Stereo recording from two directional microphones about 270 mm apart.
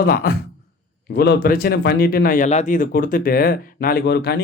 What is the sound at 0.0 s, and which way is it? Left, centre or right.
Speech, left.